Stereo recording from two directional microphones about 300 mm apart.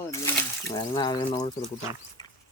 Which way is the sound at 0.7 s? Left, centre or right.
Centre.